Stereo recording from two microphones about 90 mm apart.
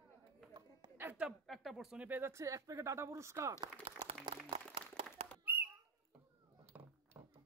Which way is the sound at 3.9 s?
90° right.